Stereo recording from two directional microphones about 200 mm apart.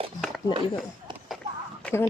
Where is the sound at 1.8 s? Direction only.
10° left (ahead or behind).